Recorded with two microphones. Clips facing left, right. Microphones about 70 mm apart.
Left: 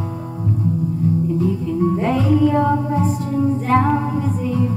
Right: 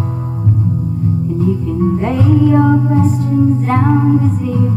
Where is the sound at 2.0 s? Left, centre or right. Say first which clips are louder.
Right 3 dB; right.